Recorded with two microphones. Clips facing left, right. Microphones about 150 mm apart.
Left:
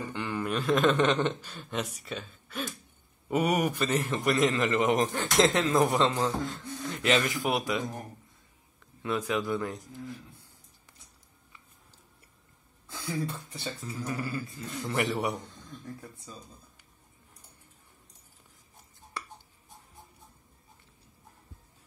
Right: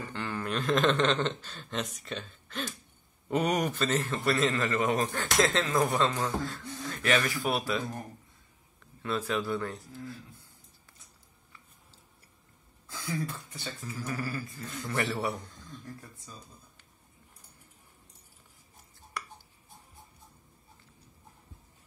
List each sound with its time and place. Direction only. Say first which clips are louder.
0.0 s a man's voice: left 3 dB; 15° left (ahead or behind)
9.0 s speech: left 1 dB; 15° left (ahead or behind)
12.8 s a man's voice: left 1 dB; 25° left (ahead or behind)